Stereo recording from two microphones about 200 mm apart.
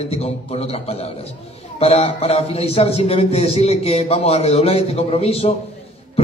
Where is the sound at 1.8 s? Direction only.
30° left (ahead or behind).